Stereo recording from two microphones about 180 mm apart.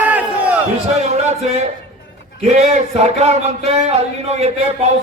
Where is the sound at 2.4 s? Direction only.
40° right (ahead or behind).